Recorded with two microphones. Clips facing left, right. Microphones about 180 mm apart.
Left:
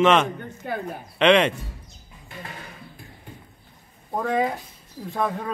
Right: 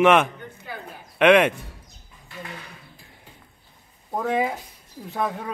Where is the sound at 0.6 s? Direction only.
55° left (ahead or behind).